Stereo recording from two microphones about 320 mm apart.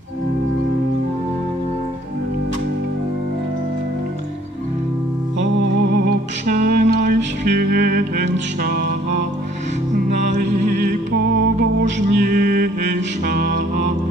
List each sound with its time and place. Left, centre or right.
5.4 s music: right
10.3 s music: right